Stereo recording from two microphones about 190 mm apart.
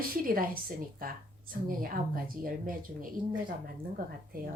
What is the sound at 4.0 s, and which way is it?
Speech, 50° right (ahead or behind).